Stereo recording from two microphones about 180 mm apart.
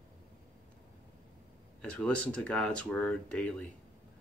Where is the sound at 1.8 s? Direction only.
5° left (ahead or behind).